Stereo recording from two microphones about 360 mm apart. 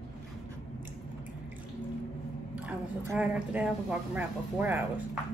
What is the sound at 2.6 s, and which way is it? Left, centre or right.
Speech, centre.